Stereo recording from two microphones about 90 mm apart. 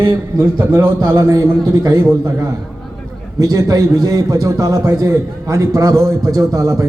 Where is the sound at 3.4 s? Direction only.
40° right (ahead or behind).